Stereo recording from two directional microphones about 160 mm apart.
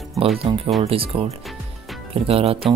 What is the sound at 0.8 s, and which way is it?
Speech, 35° right (ahead or behind).